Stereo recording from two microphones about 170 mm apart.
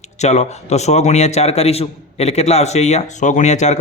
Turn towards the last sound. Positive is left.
turn(degrees=45)  # may be behind; listen again after turning